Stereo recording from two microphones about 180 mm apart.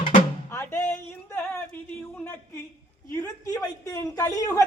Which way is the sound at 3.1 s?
15° left (ahead or behind).